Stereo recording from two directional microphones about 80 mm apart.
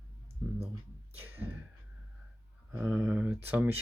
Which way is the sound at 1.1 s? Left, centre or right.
Right.